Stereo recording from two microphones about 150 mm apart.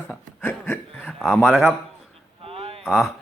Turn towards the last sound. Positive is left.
turn(degrees=0)  # may be behind; listen again after turning